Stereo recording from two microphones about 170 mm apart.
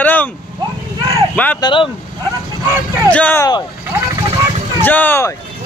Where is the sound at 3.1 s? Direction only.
10° left (ahead or behind).